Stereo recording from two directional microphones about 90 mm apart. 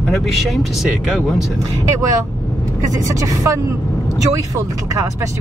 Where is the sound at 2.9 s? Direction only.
35° right (ahead or behind).